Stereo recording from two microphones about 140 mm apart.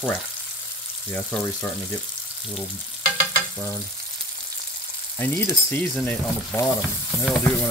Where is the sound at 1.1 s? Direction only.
10° left (ahead or behind).